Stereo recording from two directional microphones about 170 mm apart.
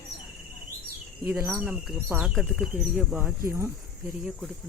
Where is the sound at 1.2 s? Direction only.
10° right (ahead or behind).